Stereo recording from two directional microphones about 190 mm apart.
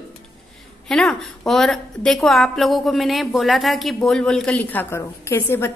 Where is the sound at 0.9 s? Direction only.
5° left (ahead or behind).